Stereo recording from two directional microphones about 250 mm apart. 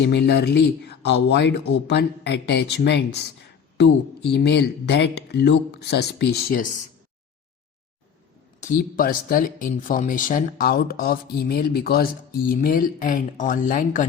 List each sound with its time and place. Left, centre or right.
0.0 s speech: left
8.6 s speech: left